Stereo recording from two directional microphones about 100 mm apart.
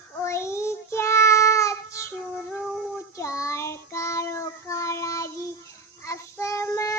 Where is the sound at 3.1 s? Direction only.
30° left (ahead or behind).